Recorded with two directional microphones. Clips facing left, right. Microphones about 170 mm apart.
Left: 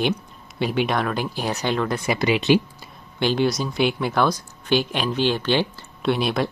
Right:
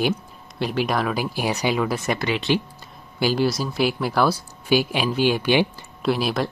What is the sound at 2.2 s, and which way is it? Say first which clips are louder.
Speech: left 4 dB; 20° left (ahead or behind).